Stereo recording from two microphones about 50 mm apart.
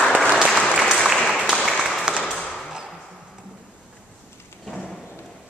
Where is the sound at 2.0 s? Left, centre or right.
Centre.